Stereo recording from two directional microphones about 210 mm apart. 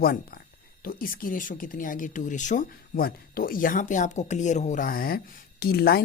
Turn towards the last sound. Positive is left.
turn(degrees=45)  # may be behind; listen again after turning